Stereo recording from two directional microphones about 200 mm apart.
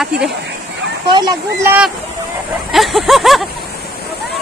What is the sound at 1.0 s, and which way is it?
Speech, 20° right (ahead or behind).